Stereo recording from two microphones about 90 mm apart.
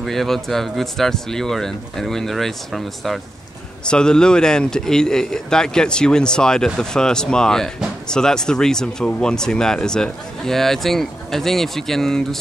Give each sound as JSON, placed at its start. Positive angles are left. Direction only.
{"t": 0.0, "sound": "speech", "side_deg": 0}